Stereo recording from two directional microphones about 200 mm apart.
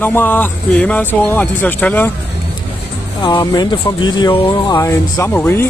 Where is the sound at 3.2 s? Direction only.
20° left (ahead or behind).